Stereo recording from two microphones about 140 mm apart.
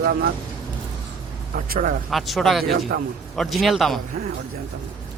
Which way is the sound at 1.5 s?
80° right.